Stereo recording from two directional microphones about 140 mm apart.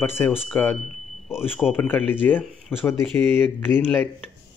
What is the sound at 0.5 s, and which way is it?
Speech, 10° left (ahead or behind).